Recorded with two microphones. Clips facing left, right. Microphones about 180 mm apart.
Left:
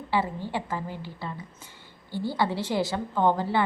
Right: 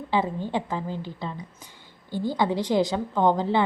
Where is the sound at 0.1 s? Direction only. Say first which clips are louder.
Right 2 dB; 20° right (ahead or behind).